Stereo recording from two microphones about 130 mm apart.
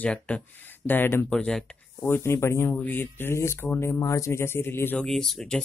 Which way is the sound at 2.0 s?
20° left (ahead or behind).